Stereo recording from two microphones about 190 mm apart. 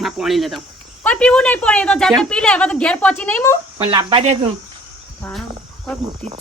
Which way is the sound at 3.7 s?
20° right (ahead or behind).